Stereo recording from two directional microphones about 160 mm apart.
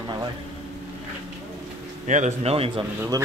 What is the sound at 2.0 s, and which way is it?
Speech, 50° right (ahead or behind).